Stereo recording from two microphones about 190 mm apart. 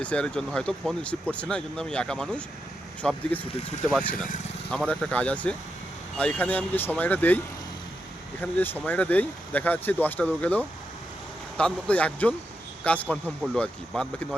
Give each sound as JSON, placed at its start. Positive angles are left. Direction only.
{"t": 0.0, "sound": "speech", "side_deg": 5}
{"t": 4.7, "sound": "speech", "side_deg": 5}